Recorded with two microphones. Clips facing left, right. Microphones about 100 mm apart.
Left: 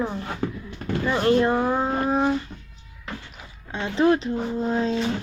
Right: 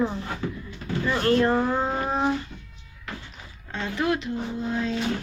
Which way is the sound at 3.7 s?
15° left (ahead or behind).